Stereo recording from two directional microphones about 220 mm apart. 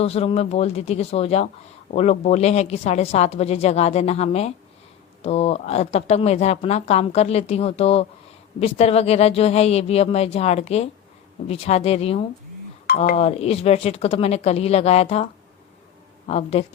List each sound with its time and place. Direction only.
0.0 s a woman's voice: 25° left (ahead or behind)